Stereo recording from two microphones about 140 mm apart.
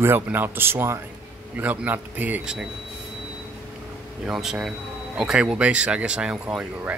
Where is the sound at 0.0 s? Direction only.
15° right (ahead or behind).